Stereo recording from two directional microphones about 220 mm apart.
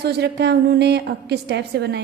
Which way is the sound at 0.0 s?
50° right (ahead or behind).